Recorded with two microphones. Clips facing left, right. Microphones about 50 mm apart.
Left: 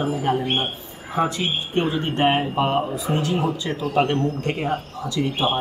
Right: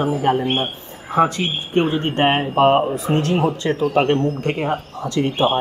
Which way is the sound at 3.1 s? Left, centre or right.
Right.